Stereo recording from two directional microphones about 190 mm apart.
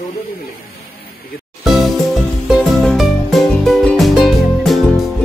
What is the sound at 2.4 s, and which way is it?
Music, centre (ahead or behind).